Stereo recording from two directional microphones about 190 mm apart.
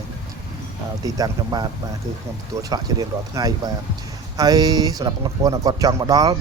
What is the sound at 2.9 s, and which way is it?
Speech, 20° right (ahead or behind).